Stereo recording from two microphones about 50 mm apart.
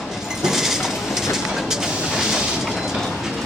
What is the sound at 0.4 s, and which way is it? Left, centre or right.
Train, centre.